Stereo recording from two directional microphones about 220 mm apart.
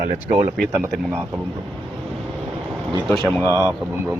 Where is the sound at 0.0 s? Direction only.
30° right (ahead or behind).